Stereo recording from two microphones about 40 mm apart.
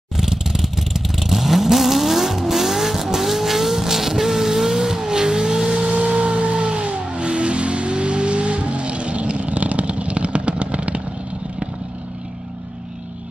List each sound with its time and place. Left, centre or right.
0.2 s vehicle: centre
5.9 s vehicle: right